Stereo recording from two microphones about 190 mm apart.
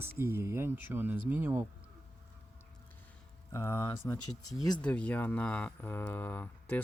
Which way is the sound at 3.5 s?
15° left (ahead or behind).